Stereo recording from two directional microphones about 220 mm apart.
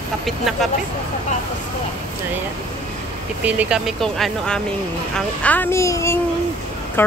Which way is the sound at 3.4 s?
5° right (ahead or behind).